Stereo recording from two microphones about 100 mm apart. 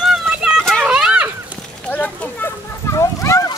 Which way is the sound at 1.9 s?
15° left (ahead or behind).